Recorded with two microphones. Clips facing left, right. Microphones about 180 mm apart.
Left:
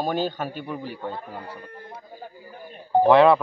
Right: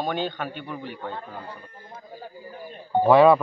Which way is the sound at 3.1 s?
10° right (ahead or behind).